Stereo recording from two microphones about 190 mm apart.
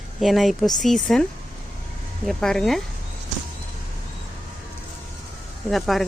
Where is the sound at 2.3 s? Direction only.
Centre (ahead or behind).